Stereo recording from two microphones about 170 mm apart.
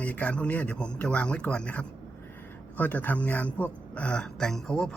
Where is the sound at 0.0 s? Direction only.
10° left (ahead or behind).